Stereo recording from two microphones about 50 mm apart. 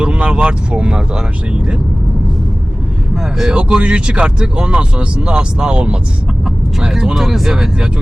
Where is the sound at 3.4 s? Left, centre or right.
Centre.